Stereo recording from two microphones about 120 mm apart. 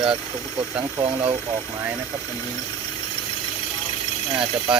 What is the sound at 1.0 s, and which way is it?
Speech, 55° right (ahead or behind).